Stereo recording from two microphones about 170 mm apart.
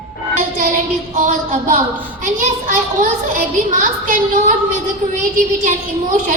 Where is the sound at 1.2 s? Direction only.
50° right (ahead or behind).